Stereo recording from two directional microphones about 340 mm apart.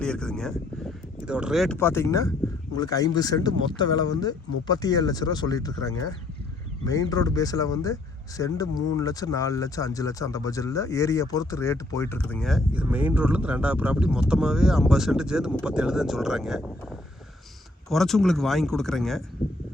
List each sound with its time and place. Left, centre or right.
0.0 s speech: centre
17.8 s speech: centre